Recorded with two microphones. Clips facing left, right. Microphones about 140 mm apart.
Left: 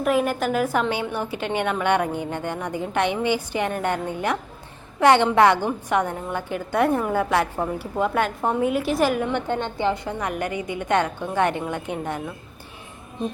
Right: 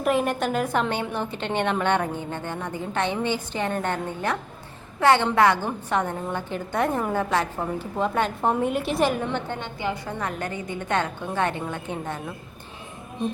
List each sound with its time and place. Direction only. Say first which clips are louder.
0.0 s a woman's voice: left 2 dB; centre (ahead or behind)
9.8 s a woman's voice: left 1 dB; 15° left (ahead or behind)